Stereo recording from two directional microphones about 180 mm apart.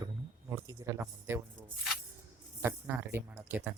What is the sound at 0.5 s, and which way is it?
Speech, 15° right (ahead or behind).